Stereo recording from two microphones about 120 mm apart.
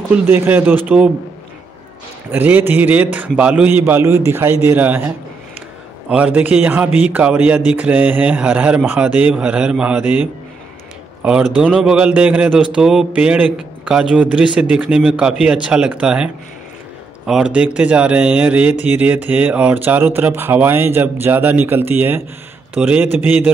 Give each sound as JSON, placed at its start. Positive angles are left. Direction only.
{"t": 0.1, "sound": "a man's voice", "side_deg": -20}
{"t": 2.3, "sound": "a man's voice", "side_deg": -15}
{"t": 17.3, "sound": "a man's voice", "side_deg": -10}